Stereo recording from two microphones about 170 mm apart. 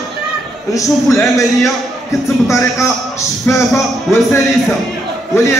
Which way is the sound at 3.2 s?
15° left (ahead or behind).